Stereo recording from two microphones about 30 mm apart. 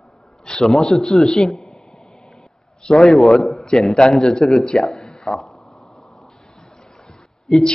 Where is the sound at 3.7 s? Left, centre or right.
Centre.